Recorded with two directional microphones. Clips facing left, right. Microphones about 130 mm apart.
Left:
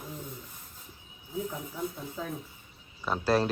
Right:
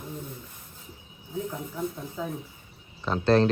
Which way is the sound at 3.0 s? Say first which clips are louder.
Right 5 dB; 5° left (ahead or behind).